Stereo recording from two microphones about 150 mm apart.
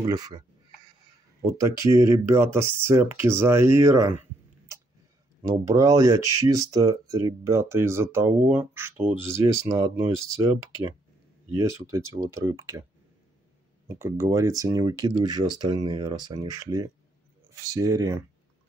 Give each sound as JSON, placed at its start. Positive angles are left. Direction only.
{"t": 0.0, "sound": "speech", "side_deg": -25}
{"t": 1.4, "sound": "speech", "side_deg": -20}
{"t": 5.4, "sound": "speech", "side_deg": -20}
{"t": 11.5, "sound": "speech", "side_deg": -20}
{"t": 13.8, "sound": "speech", "side_deg": -20}